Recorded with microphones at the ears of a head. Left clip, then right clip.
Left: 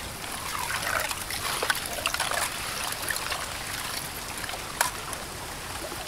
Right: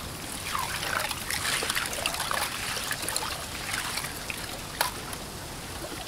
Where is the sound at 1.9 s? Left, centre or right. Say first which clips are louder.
Left 1 dB; centre.